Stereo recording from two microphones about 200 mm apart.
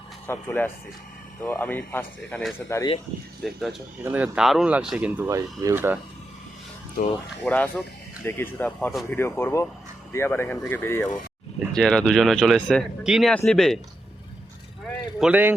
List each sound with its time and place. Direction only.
0.3 s speech: 10° left (ahead or behind)
3.4 s speech: centre (ahead or behind)
7.0 s speech: 45° left (ahead or behind)
7.4 s speech: 5° left (ahead or behind)
15.2 s speech: 10° right (ahead or behind)